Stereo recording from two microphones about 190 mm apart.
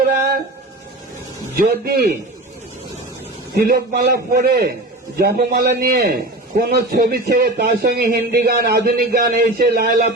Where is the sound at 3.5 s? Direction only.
55° right (ahead or behind).